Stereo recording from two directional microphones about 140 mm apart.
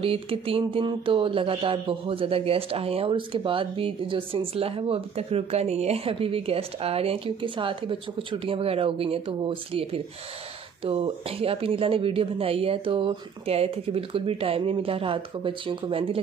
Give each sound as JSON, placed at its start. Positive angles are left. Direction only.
{"t": 0.0, "sound": "speech", "side_deg": -40}